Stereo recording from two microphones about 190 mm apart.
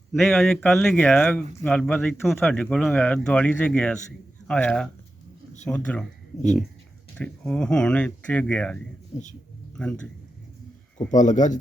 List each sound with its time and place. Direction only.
0.1 s speech: centre (ahead or behind)
7.2 s speech: 5° left (ahead or behind)
10.9 s speech: 40° left (ahead or behind)